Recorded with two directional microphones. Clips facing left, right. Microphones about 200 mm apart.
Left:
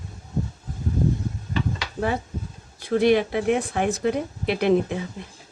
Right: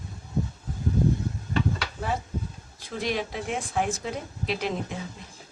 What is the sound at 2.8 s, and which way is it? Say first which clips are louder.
Speech: left 11 dB; 60° left (ahead or behind).